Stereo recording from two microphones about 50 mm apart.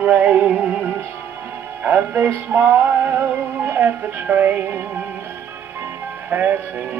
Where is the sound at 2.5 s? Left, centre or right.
Right.